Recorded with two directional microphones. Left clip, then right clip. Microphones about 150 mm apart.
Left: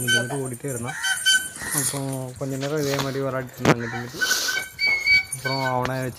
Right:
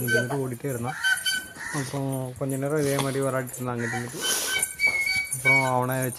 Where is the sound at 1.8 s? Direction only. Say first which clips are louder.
Left 3 dB; 15° right (ahead or behind).